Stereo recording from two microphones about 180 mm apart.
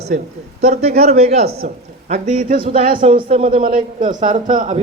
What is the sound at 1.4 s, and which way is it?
Speech, 60° right (ahead or behind).